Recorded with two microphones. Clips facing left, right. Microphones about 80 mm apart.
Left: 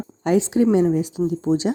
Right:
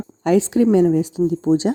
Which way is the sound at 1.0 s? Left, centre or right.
Right.